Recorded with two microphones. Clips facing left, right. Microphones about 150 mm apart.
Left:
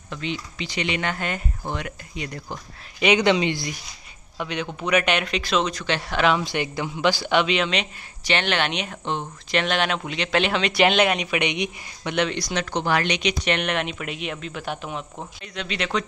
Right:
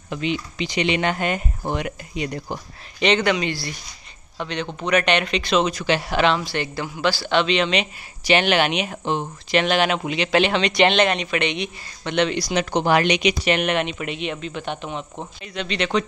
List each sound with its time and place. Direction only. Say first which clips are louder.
0.1 s speech: right 5 dB; 15° right (ahead or behind)
3.0 s speech: left 1 dB; 10° left (ahead or behind)
4.4 s speech: right 1 dB; 10° left (ahead or behind); by 6.2 s 10° right (ahead or behind)
6.4 s speech: even; 15° left (ahead or behind)
12.1 s speech: right 3 dB; centre (ahead or behind)
12.7 s speech: right 5 dB; 15° right (ahead or behind); by 16.1 s centre (ahead or behind)